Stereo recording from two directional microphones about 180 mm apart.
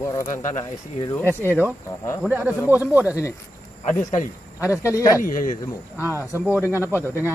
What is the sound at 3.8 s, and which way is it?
Speech, 45° left (ahead or behind).